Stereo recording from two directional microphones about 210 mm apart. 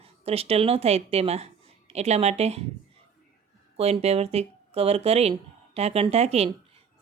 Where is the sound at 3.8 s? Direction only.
30° right (ahead or behind).